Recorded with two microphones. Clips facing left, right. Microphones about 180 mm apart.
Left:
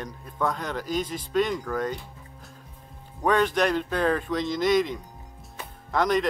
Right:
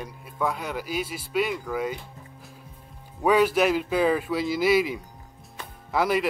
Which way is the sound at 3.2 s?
5° right (ahead or behind).